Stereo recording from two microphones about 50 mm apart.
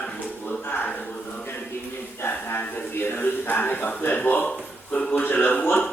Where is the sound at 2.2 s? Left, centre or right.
Left.